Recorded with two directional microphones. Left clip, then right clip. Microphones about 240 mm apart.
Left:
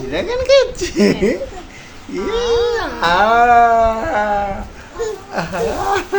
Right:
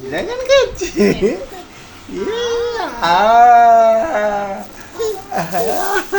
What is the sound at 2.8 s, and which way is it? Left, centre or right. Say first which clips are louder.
Speech: right 1 dB; centre.